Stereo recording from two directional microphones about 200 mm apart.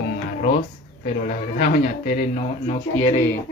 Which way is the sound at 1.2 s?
40° left (ahead or behind).